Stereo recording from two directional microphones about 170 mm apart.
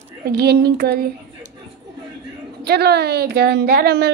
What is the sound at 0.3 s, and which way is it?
Speech, 70° right (ahead or behind).